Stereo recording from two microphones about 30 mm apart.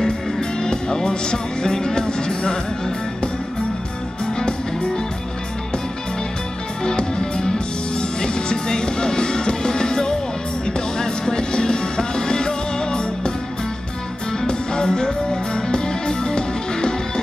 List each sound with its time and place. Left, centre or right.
0.4 s music: left
6.8 s music: left
14.5 s music: left